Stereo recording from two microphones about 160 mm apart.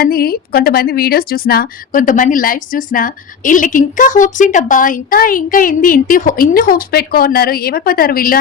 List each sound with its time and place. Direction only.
0.0 s speech: 70° left (ahead or behind)